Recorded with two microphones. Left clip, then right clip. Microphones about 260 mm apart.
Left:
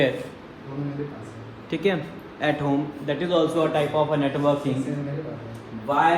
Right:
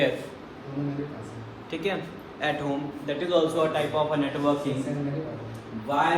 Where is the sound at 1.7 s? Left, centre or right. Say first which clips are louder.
Left 5 dB; left.